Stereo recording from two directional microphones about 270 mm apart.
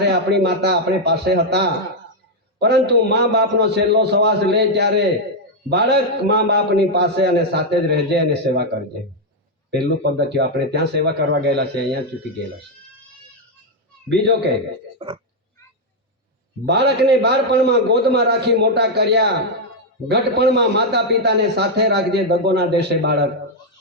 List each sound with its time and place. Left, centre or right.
0.0 s a man's voice: right
9.6 s a man's voice: right
14.1 s a man's voice: right
14.9 s speech: centre
16.6 s a man's voice: right